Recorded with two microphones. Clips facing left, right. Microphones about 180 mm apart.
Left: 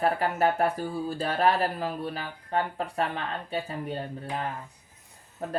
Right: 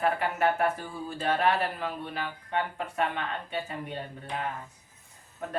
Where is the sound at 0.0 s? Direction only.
35° left (ahead or behind).